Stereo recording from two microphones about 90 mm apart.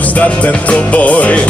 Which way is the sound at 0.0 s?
15° left (ahead or behind).